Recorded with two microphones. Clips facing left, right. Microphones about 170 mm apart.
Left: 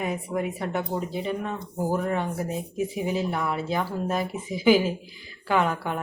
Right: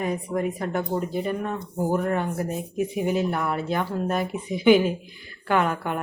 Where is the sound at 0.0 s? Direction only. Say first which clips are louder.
Right 2 dB; 5° left (ahead or behind).